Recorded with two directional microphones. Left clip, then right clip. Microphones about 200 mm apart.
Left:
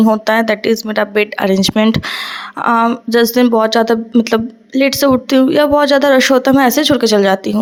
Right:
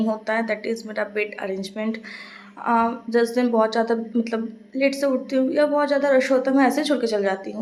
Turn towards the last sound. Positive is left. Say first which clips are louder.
# left 11 dB
turn(degrees=45)  # may be behind; listen again after turning